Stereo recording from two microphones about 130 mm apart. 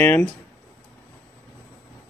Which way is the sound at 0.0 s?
15° left (ahead or behind).